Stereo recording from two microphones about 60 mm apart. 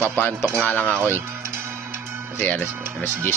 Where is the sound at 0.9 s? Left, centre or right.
Right.